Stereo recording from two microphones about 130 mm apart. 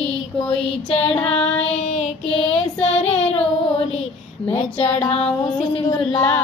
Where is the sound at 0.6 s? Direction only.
50° left (ahead or behind).